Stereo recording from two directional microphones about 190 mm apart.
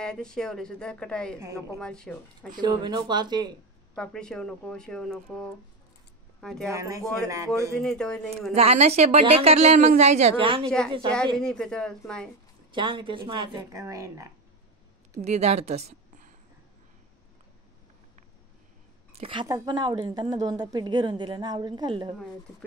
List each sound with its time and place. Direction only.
0.0 s speech: 5° left (ahead or behind)
1.4 s speech: 15° right (ahead or behind)
1.8 s speech: 5° left (ahead or behind)
2.5 s a woman's voice: 20° right (ahead or behind)
3.9 s speech: 5° left (ahead or behind)
6.7 s speech: 15° right (ahead or behind)
7.8 s speech: 5° left (ahead or behind)
8.5 s speech: 35° right (ahead or behind)
11.3 s speech: 5° left (ahead or behind)
12.7 s a woman's voice: 25° right (ahead or behind)
15.2 s a woman's voice: 35° right (ahead or behind)
19.1 s a woman's voice: 30° right (ahead or behind)